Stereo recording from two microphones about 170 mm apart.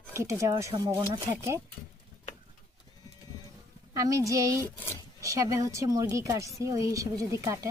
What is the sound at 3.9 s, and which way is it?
Speech, 20° right (ahead or behind).